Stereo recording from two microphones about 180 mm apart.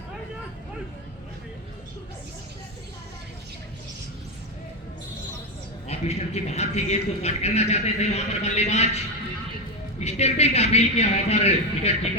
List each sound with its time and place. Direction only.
5.9 s a man's voice: 35° left (ahead or behind)
10.0 s a man's voice: 35° left (ahead or behind)